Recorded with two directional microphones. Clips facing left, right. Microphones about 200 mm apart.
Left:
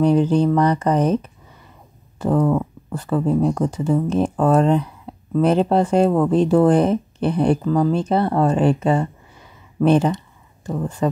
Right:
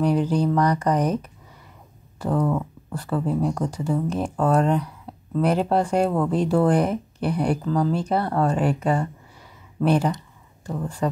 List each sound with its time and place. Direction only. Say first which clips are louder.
0.0 s speech: left 5 dB; 25° left (ahead or behind)
5.1 s a sound: left 3 dB; 20° left (ahead or behind)
5.4 s speech: left 4 dB; 25° left (ahead or behind)